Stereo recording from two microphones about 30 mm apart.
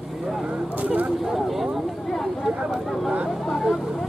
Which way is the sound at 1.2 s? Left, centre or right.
Centre.